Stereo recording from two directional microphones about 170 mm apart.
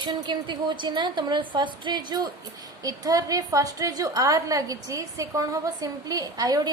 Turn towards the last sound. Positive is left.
turn(degrees=-20)  # may be behind; listen again after turning